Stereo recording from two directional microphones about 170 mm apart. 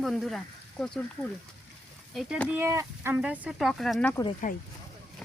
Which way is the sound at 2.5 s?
15° right (ahead or behind).